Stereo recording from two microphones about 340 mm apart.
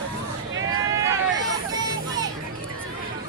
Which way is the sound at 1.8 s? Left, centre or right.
Centre.